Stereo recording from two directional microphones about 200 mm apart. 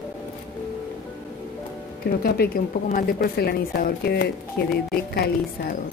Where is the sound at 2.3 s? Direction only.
50° left (ahead or behind).